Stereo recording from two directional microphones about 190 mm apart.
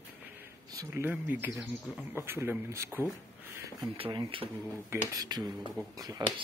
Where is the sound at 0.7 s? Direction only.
15° right (ahead or behind).